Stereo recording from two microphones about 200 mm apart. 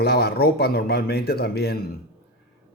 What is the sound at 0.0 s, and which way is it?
A man's voice, 50° left (ahead or behind).